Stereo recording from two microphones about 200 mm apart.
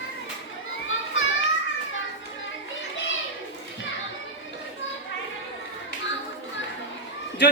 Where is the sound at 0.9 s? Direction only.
75° left (ahead or behind).